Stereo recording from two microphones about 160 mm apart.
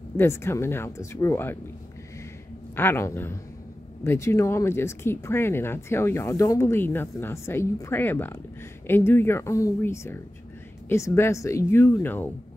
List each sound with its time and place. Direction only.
0.2 s speech: 15° left (ahead or behind)
2.7 s speech: 15° left (ahead or behind)